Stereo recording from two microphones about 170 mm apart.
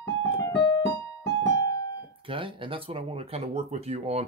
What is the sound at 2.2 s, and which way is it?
Speech, 30° right (ahead or behind).